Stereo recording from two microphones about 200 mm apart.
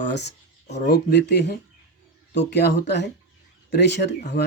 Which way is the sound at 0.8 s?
55° left (ahead or behind).